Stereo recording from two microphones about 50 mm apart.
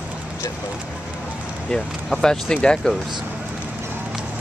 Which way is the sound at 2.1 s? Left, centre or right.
Centre.